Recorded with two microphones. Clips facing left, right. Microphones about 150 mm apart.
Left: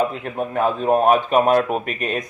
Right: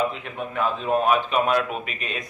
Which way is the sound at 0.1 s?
45° left (ahead or behind).